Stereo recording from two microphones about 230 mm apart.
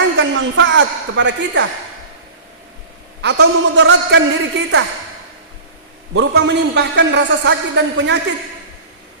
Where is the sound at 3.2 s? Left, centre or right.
Right.